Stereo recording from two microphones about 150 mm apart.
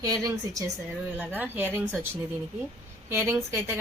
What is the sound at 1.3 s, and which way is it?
A woman's voice, 10° right (ahead or behind).